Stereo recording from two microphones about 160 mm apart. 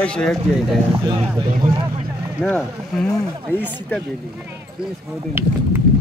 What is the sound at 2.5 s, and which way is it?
Speech, 5° left (ahead or behind).